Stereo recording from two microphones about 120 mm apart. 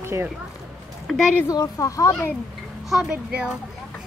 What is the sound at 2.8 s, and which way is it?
Speech, 5° right (ahead or behind).